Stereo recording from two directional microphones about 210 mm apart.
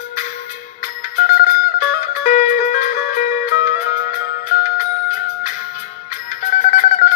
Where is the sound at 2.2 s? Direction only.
35° left (ahead or behind).